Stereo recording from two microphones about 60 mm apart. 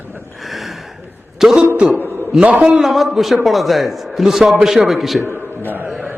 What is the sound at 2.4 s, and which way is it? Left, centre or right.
Speech, right.